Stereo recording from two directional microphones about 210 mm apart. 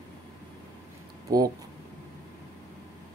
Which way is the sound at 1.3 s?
15° right (ahead or behind).